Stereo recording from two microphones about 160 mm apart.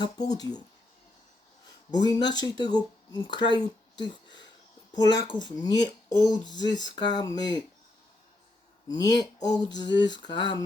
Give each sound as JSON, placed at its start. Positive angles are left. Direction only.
{"t": 0.0, "sound": "speech", "side_deg": 25}
{"t": 1.9, "sound": "speech", "side_deg": 25}
{"t": 8.9, "sound": "speech", "side_deg": 25}